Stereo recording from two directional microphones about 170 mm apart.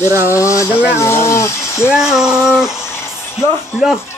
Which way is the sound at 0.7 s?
10° right (ahead or behind).